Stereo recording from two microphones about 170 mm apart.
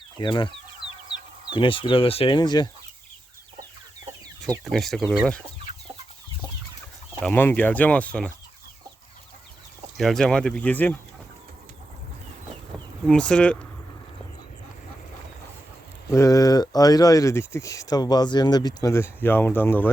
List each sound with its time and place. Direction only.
0.2 s speech: 30° left (ahead or behind)
4.6 s speech: centre (ahead or behind)
7.2 s speech: 10° left (ahead or behind)
10.0 s speech: centre (ahead or behind)
13.1 s speech: 5° left (ahead or behind)
16.1 s speech: 20° left (ahead or behind)